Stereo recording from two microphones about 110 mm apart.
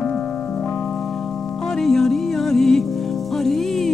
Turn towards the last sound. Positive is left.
turn(degrees=0)  # may be behind; listen again after turning